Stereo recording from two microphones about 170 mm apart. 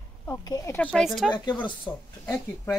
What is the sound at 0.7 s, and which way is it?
Speech, 5° left (ahead or behind).